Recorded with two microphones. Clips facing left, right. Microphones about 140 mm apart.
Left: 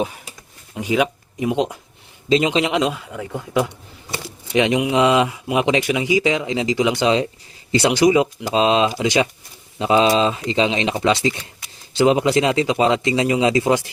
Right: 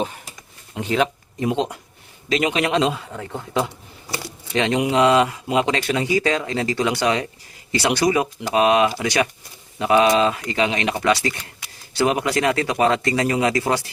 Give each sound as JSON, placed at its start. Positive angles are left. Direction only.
{"t": 0.8, "sound": "speech", "side_deg": 10}
{"t": 2.8, "sound": "a man's voice", "side_deg": 5}
{"t": 4.1, "sound": "a sound", "side_deg": 15}
{"t": 4.9, "sound": "speech", "side_deg": 20}